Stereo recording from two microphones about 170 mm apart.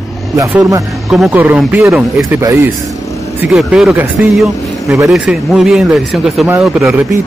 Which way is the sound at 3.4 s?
5° right (ahead or behind).